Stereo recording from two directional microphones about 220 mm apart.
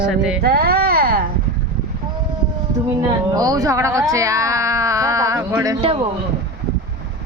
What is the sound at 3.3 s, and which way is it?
Speech, 15° right (ahead or behind).